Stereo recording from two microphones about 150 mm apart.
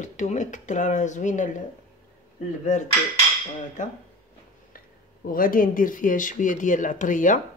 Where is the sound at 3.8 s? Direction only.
55° left (ahead or behind).